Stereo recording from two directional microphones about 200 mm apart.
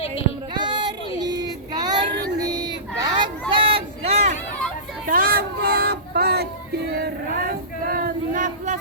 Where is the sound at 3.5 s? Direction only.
30° right (ahead or behind).